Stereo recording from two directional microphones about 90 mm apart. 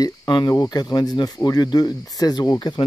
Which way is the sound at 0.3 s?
55° left (ahead or behind).